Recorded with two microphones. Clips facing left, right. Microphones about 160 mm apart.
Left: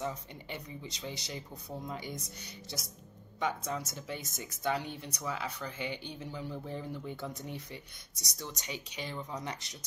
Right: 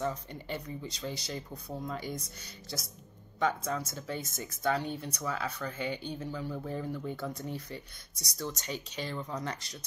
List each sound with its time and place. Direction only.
0.0 s speech: 15° left (ahead or behind)